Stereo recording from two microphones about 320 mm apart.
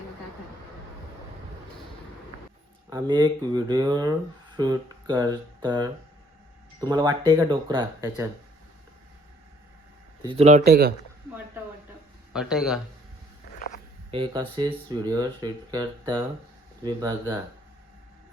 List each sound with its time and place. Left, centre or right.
2.9 s speech: centre
10.2 s speech: centre
12.3 s a man's voice: centre
14.1 s speech: centre